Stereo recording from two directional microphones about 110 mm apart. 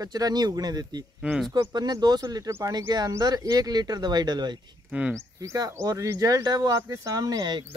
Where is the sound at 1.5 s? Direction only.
35° right (ahead or behind).